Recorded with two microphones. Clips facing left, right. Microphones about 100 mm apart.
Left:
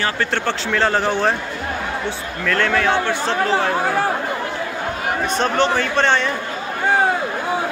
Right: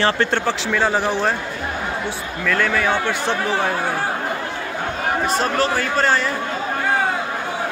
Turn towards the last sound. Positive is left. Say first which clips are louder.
# left 1 dB
turn(degrees=-5)  # may be behind; listen again after turning